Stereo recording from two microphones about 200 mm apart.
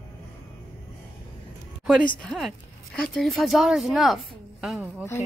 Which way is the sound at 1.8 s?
Centre (ahead or behind).